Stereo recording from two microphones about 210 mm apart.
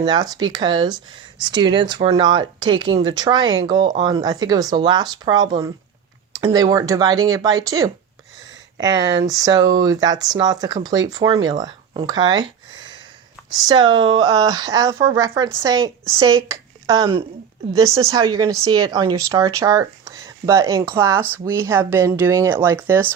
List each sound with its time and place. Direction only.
0.0 s speech: 20° right (ahead or behind)